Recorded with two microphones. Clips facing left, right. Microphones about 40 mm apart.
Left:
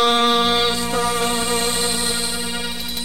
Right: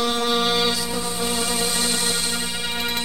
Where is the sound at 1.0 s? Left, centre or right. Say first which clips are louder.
Left 7 dB; left.